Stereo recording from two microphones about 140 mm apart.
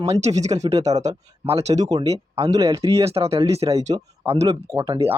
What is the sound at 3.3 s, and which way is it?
Speech, 45° right (ahead or behind).